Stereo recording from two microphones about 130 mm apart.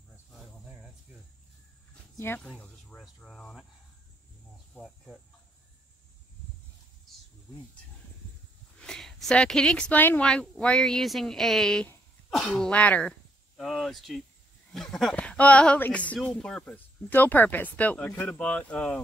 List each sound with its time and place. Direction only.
2.1 s speech: 15° left (ahead or behind)
2.4 s speech: 5° left (ahead or behind)
4.7 s speech: centre (ahead or behind)
8.7 s a woman's voice: 5° left (ahead or behind)
13.6 s a woman's voice: centre (ahead or behind)